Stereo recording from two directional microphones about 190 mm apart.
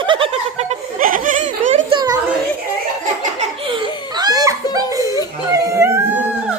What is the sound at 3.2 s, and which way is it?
Laughter, 30° right (ahead or behind).